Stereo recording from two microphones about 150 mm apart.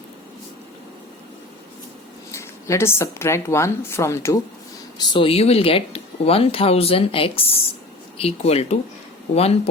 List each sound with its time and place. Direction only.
2.3 s speech: 20° left (ahead or behind)
4.9 s speech: 30° left (ahead or behind)